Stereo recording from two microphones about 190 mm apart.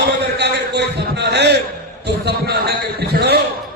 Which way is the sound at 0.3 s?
60° right (ahead or behind).